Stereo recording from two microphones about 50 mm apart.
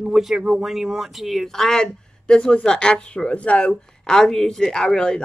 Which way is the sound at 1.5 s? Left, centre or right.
Centre.